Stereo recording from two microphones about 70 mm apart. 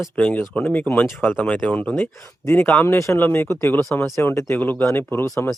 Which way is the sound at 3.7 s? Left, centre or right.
Left.